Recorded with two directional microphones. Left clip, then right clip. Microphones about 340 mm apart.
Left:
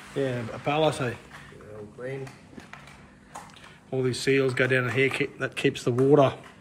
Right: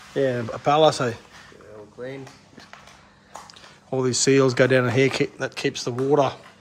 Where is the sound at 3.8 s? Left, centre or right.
Centre.